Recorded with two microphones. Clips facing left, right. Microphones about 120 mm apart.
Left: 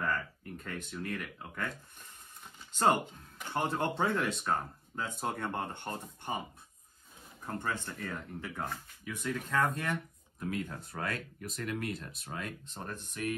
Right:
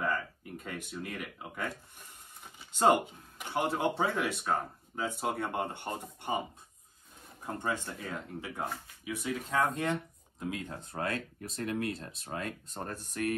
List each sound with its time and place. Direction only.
0.0 s speech: 10° right (ahead or behind)
3.3 s speech: 15° right (ahead or behind)
7.4 s speech: 15° right (ahead or behind); by 13.0 s 35° right (ahead or behind)
13.1 s speech: 55° right (ahead or behind)